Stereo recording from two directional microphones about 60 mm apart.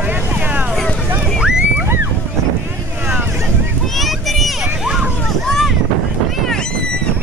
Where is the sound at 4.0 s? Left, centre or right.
Centre.